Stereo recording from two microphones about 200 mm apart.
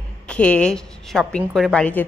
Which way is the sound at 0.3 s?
5° left (ahead or behind).